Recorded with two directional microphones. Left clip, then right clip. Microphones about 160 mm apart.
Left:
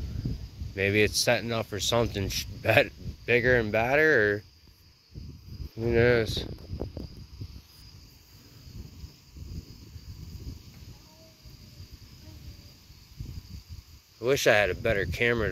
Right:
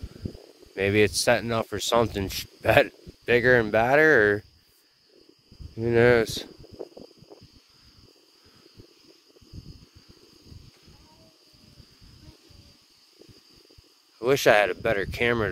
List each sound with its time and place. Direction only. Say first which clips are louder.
0.7 s speech: right 2 dB; 65° right (ahead or behind)
5.9 s speech: right 4 dB; 90° right
14.2 s speech: right 3 dB; 90° right